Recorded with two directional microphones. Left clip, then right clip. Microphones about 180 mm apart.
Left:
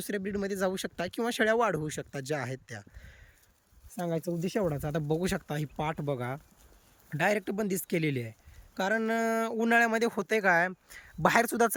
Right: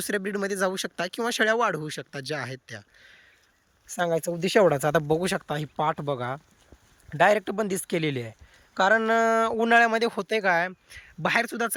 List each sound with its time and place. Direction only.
0.0 s a man's voice: 5° left (ahead or behind)
4.4 s speech: 50° right (ahead or behind)
4.9 s a man's voice: 5° left (ahead or behind); by 11.7 s 30° left (ahead or behind)